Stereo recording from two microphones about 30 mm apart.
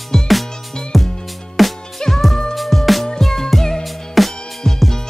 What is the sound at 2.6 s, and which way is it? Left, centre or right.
Music, centre.